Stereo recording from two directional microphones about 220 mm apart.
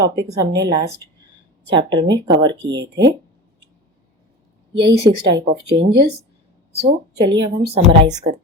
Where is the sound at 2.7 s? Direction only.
50° right (ahead or behind).